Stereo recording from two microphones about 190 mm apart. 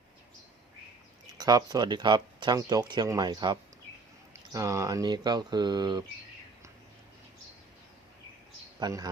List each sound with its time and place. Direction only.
1.4 s speech: 20° right (ahead or behind)
8.8 s speech: 20° right (ahead or behind)